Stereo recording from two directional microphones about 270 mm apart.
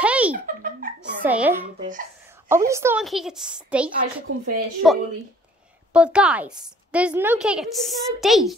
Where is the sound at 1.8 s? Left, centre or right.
Right.